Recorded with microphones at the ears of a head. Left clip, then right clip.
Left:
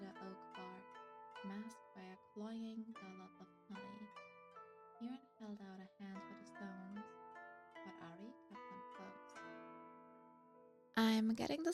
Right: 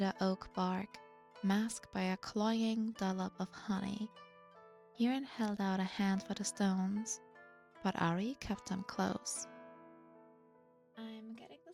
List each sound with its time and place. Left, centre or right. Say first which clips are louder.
0.0 s music: right 16 dB; right
1.4 s speech: right 16 dB; right
10.9 s speech: left 13 dB; left